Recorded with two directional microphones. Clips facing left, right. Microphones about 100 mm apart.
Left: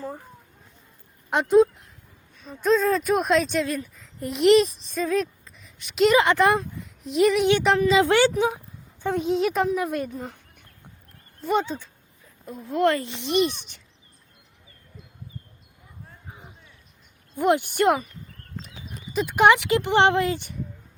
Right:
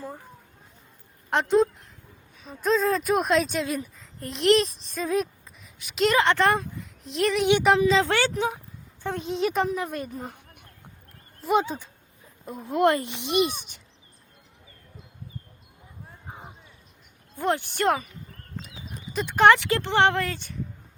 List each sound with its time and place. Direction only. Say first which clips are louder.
1.3 s speech: left 3 dB; centre (ahead or behind)
5.6 s speech: left 4 dB; centre (ahead or behind)
7.9 s speech: left 4 dB; 15° left (ahead or behind)
9.0 s speech: left 4 dB; centre (ahead or behind)
10.2 s chicken: left 1 dB; 15° right (ahead or behind)
11.3 s speech: right 1 dB; 5° right (ahead or behind)
12.5 s speech: even; 20° right (ahead or behind)
17.3 s speech: left 5 dB; 15° left (ahead or behind)
19.4 s speech: even; 15° left (ahead or behind)